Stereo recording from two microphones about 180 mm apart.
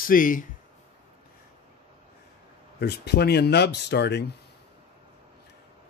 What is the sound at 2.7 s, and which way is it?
Speech, 65° left (ahead or behind).